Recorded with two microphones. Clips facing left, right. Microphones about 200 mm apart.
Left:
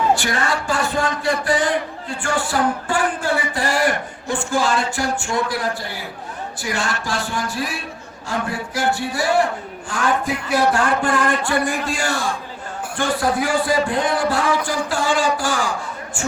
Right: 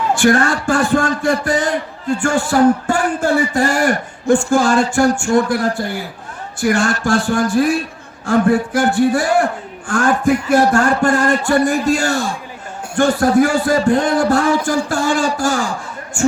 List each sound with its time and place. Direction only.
0.2 s a man's voice: 50° right (ahead or behind)